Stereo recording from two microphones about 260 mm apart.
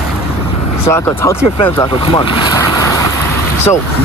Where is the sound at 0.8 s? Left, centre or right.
Centre.